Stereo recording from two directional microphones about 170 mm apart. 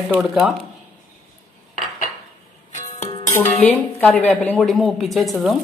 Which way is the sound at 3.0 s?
45° left (ahead or behind).